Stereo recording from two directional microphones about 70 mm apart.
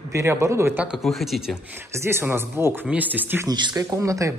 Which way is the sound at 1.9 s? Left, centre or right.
Right.